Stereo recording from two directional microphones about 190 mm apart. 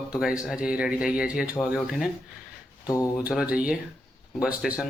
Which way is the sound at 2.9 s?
20° left (ahead or behind).